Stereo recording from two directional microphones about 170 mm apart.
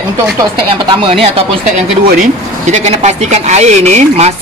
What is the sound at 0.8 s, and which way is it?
Speech, 30° right (ahead or behind).